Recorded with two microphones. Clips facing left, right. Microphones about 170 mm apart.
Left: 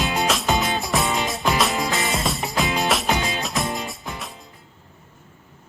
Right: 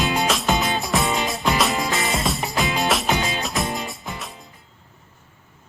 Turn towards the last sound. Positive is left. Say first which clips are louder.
# even
turn(degrees=0)  # may be behind; listen again after turning